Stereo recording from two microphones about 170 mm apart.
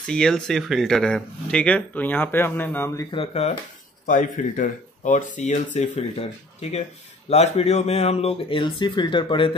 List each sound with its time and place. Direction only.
0.0 s speech: 5° left (ahead or behind)
3.1 s speech: 35° left (ahead or behind)
4.0 s speech: 50° left (ahead or behind)
7.2 s speech: 40° left (ahead or behind)